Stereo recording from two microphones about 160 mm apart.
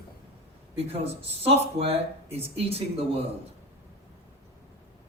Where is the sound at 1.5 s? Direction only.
40° right (ahead or behind).